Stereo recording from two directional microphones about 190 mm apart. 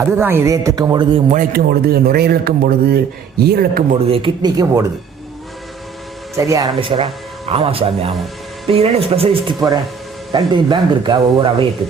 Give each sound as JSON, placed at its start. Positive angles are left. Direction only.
{"t": 0.0, "sound": "a man's voice", "side_deg": -10}
{"t": 1.3, "sound": "speech", "side_deg": -50}
{"t": 4.0, "sound": "speech", "side_deg": -30}
{"t": 6.3, "sound": "speech", "side_deg": -15}